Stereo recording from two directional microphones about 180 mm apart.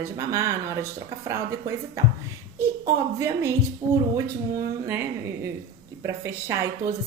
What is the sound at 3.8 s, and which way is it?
Speech, 30° right (ahead or behind).